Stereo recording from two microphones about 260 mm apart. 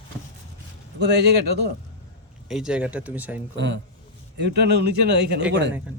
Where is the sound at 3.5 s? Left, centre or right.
Right.